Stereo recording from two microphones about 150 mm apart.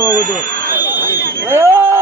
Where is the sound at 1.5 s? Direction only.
15° right (ahead or behind).